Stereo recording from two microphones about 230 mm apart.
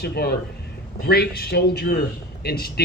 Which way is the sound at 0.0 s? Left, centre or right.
Left.